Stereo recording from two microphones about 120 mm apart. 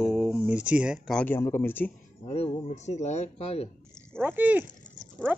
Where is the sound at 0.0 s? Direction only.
10° right (ahead or behind).